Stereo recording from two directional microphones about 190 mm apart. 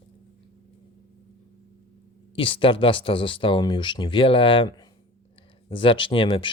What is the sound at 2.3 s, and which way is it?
Speech, 30° left (ahead or behind).